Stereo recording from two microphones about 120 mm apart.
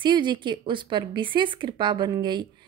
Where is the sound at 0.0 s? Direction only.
40° right (ahead or behind).